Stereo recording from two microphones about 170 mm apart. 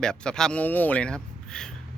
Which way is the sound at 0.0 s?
5° left (ahead or behind).